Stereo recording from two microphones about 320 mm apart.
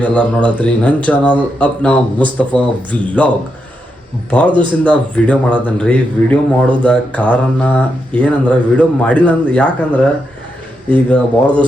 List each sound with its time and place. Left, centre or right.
0.0 s speech: centre
4.3 s speech: centre